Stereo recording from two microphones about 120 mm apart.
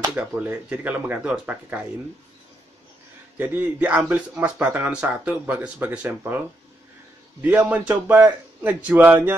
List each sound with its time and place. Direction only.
0.1 s a man's voice: 15° right (ahead or behind)
3.3 s a man's voice: 15° right (ahead or behind)
7.4 s a man's voice: 15° right (ahead or behind)